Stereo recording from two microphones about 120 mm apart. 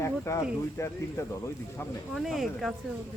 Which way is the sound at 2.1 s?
Centre (ahead or behind).